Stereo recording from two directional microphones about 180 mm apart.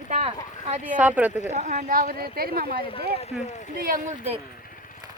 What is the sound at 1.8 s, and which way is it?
Speech, 55° right (ahead or behind).